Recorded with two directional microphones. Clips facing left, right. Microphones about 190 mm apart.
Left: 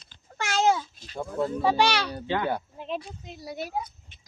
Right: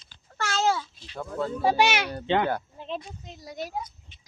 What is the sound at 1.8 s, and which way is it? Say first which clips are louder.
Speech: even; 15° right (ahead or behind).